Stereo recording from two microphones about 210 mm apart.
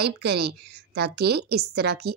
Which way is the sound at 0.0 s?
50° right (ahead or behind).